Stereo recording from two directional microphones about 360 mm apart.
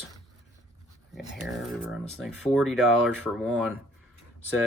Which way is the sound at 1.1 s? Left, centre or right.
Centre.